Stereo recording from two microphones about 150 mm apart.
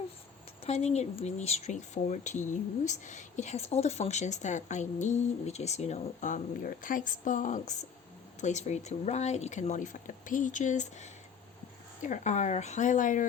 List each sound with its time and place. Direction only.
0.6 s speech: 45° left (ahead or behind)